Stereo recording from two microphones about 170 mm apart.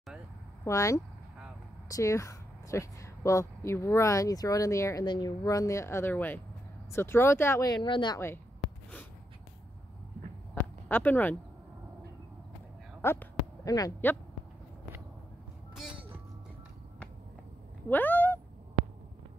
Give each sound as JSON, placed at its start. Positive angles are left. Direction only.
{"t": 0.7, "sound": "speech", "side_deg": 20}
{"t": 10.5, "sound": "a sound", "side_deg": 10}
{"t": 13.0, "sound": "speech", "side_deg": 15}
{"t": 17.8, "sound": "cat", "side_deg": 10}